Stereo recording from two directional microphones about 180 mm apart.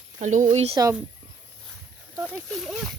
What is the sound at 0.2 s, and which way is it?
Speech, 45° right (ahead or behind).